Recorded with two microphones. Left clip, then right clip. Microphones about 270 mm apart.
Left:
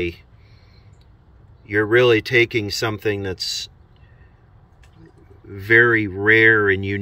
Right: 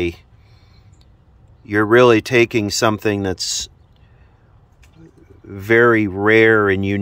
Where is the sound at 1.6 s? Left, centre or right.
Right.